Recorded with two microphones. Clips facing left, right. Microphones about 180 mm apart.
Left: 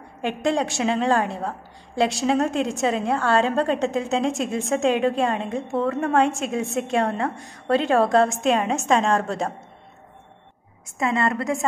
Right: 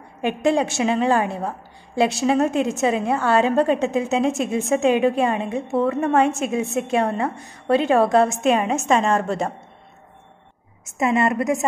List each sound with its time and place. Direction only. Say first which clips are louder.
0.2 s a woman's voice: right 3 dB; 5° right (ahead or behind)
10.9 s a woman's voice: right 3 dB; 20° right (ahead or behind)